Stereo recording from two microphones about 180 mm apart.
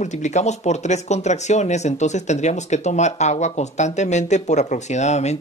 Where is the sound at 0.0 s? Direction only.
40° left (ahead or behind).